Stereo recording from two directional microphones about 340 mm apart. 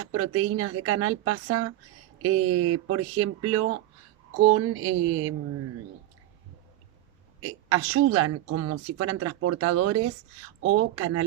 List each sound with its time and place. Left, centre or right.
0.0 s speech: right
4.5 s mantra: right
7.4 s speech: right
10.6 s mantra: right